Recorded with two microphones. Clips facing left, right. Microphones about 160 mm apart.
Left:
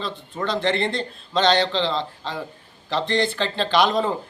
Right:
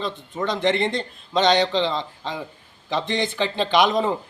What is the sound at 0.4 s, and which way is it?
A man's voice, 15° right (ahead or behind).